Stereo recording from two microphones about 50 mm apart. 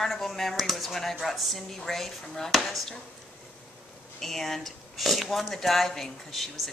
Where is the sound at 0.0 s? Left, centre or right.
Centre.